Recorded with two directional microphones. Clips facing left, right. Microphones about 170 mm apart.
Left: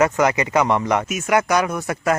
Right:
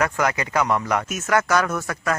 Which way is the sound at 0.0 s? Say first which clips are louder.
Left 5 dB; 15° left (ahead or behind).